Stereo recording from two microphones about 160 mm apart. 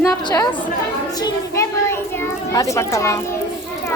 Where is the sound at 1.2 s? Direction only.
15° left (ahead or behind).